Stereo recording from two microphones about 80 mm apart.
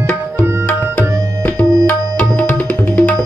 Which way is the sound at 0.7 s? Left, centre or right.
Centre.